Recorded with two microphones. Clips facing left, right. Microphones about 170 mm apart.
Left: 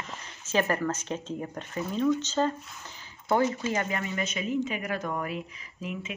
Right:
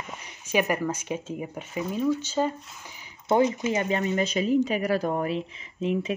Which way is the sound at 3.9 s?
30° right (ahead or behind).